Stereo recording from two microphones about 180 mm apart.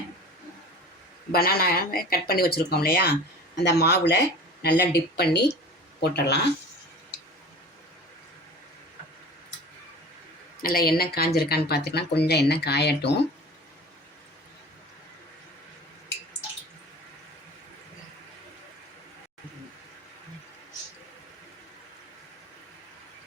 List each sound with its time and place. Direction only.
1.3 s speech: 55° left (ahead or behind)
10.6 s speech: 55° left (ahead or behind)